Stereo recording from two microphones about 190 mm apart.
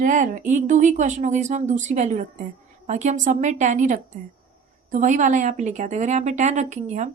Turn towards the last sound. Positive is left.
turn(degrees=-40)  # may be behind; listen again after turning